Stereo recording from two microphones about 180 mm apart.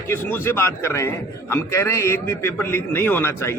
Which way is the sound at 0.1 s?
15° left (ahead or behind).